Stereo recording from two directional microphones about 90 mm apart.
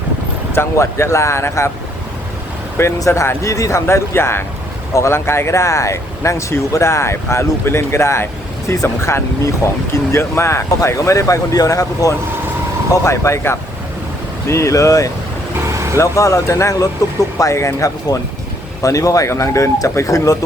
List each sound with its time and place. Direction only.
0.5 s speech: 30° left (ahead or behind)
2.7 s speech: 30° left (ahead or behind)